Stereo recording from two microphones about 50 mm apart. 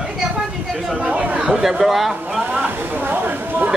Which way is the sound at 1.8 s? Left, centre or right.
Centre.